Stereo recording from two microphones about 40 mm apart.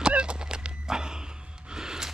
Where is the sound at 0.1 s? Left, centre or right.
Right.